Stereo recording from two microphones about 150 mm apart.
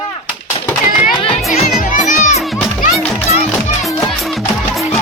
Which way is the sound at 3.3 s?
45° left (ahead or behind).